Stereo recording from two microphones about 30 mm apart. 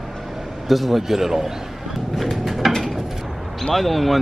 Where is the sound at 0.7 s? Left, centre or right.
Centre.